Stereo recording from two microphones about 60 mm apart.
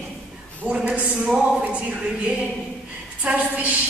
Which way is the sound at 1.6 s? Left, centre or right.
Right.